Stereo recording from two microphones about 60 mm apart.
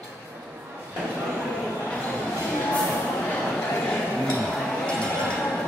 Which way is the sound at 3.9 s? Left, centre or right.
Centre.